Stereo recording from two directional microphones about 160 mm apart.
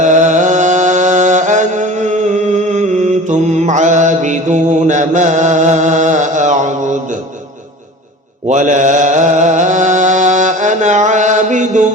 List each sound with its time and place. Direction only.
0.0 s music: 50° right (ahead or behind)
8.4 s mantra: 50° right (ahead or behind)